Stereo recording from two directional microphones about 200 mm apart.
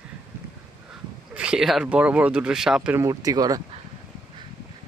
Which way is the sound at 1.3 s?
5° right (ahead or behind).